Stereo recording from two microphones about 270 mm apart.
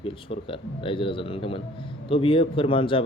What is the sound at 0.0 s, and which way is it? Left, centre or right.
Speech, centre.